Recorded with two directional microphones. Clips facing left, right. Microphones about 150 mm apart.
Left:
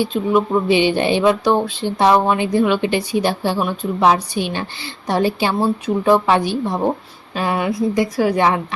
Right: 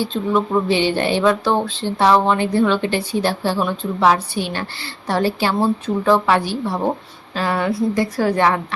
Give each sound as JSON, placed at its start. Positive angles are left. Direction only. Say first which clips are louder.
{"t": 0.0, "sound": "speech", "louder": "left 2 dB", "side_deg": 15}